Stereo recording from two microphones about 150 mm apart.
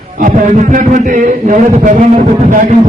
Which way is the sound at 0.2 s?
55° right (ahead or behind).